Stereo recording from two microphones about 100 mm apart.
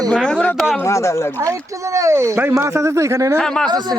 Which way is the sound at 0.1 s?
10° left (ahead or behind).